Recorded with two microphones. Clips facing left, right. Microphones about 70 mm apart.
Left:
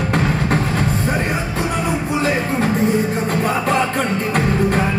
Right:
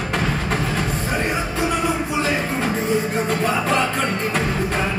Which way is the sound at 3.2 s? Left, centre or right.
Left.